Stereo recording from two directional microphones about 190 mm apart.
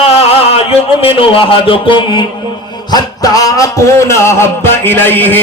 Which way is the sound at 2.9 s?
20° left (ahead or behind).